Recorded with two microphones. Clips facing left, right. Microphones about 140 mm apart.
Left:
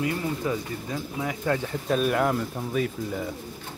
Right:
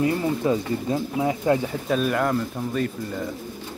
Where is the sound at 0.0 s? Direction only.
30° right (ahead or behind).